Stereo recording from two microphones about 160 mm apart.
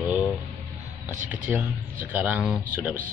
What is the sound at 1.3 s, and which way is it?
Speech, 10° right (ahead or behind).